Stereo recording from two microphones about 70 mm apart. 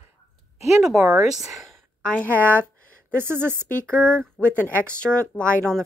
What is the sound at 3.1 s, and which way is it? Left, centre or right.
Speech, right.